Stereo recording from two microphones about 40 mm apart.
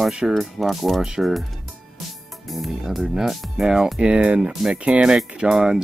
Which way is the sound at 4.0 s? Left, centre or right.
Right.